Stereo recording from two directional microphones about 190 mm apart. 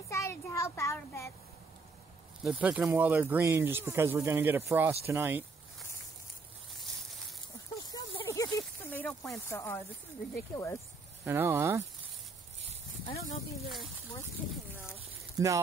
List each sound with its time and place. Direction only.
0.1 s child singing: 15° left (ahead or behind)
2.4 s speech: 10° right (ahead or behind)
7.9 s a sound: 25° left (ahead or behind)
8.3 s a sound: 15° left (ahead or behind)
9.5 s speech: 15° left (ahead or behind)
11.2 s speech: 10° right (ahead or behind)
13.1 s speech: 35° left (ahead or behind)
15.3 s speech: 15° right (ahead or behind)